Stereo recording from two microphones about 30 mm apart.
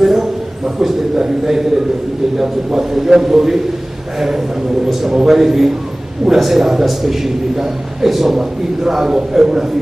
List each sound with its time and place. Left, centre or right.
0.0 s a sound: centre
1.1 s a man's voice: centre
5.0 s a man's voice: centre